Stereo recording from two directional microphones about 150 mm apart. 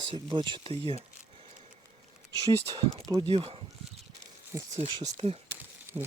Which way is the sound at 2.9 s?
25° right (ahead or behind).